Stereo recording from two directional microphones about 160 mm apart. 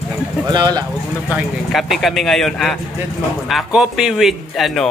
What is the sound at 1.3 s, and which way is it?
Speech, centre (ahead or behind).